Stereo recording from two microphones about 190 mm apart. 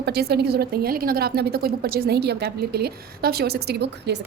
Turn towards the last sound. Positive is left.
turn(degrees=-60)  # may be behind; listen again after turning